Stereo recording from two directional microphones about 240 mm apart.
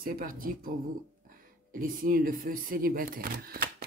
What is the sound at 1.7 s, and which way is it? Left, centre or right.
Camera, right.